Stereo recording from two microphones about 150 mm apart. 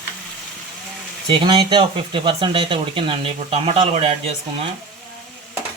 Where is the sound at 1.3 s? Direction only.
35° right (ahead or behind).